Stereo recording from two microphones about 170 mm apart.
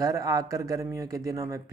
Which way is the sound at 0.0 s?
20° right (ahead or behind).